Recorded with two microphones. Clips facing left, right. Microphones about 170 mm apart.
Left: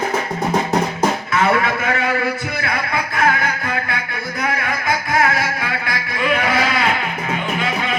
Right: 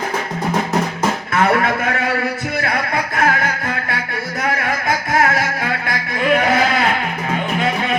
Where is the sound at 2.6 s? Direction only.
50° right (ahead or behind).